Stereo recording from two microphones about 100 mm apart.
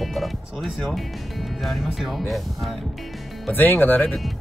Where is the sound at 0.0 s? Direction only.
Centre (ahead or behind).